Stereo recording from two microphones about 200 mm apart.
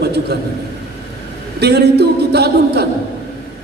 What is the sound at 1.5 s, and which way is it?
A man's voice, 55° right (ahead or behind).